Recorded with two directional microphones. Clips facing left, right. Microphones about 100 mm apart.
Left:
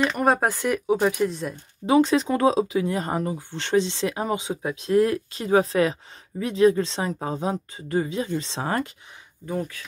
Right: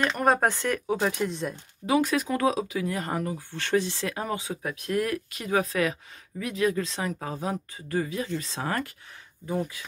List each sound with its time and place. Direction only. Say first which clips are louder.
0.0 s speech: left 2 dB; centre (ahead or behind)
1.9 s speech: left 5 dB; 25° left (ahead or behind)
9.5 s speech: left 1 dB; 5° right (ahead or behind)